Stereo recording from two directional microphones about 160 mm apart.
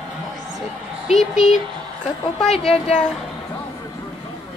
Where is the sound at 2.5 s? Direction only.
40° left (ahead or behind).